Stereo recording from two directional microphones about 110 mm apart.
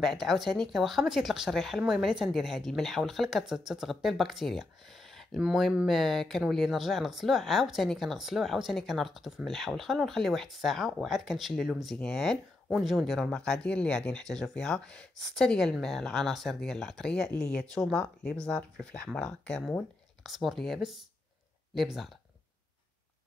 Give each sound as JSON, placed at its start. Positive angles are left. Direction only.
{"t": 0.0, "sound": "speech", "side_deg": 0}